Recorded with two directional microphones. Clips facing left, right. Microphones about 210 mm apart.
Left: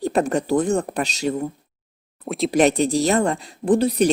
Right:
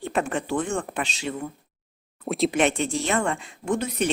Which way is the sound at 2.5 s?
40° left (ahead or behind).